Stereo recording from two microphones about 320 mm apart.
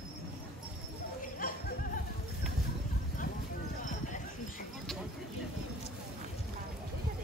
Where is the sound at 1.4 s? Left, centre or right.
Left.